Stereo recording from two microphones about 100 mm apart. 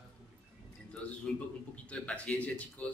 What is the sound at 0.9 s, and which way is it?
A man's voice, 10° left (ahead or behind).